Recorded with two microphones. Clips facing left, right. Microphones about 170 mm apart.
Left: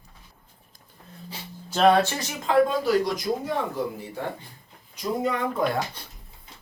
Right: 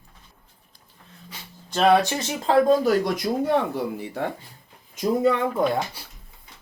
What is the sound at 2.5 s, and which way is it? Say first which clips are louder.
Speech: right 3 dB; 45° right (ahead or behind).